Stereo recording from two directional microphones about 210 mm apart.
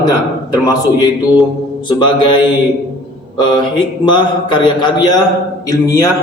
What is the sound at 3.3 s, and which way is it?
A man's voice, 20° left (ahead or behind).